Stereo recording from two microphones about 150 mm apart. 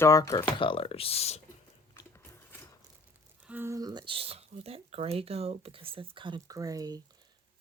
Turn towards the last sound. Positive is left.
turn(degrees=-25)  # may be behind; listen again after turning